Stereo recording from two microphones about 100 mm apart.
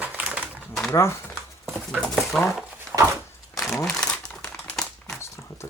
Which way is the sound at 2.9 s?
25° right (ahead or behind).